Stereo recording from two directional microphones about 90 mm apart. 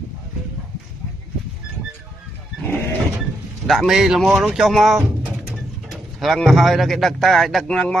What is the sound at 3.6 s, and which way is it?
Speech, centre (ahead or behind).